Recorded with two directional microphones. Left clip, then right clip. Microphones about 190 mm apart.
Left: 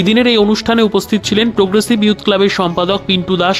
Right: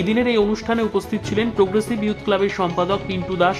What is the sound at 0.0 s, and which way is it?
Speech, 40° left (ahead or behind).